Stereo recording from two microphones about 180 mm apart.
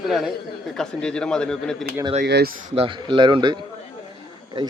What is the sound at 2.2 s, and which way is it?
Speech, 65° right (ahead or behind).